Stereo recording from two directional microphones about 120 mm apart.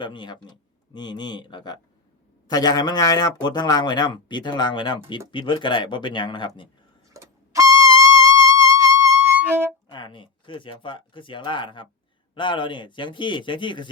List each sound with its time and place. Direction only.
0.0 s speech: 40° left (ahead or behind)
7.1 s trumpet: 25° right (ahead or behind)
9.9 s speech: 40° left (ahead or behind)